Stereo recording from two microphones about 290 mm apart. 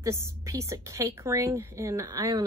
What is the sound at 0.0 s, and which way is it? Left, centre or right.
A woman's voice, centre.